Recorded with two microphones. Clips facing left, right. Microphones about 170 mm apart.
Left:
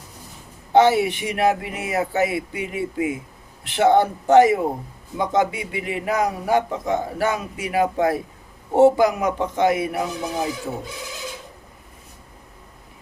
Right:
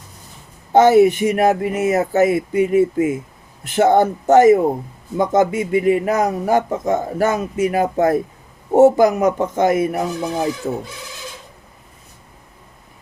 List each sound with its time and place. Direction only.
0.7 s speech: 45° right (ahead or behind)